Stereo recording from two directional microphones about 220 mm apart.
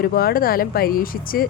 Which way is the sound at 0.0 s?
45° left (ahead or behind).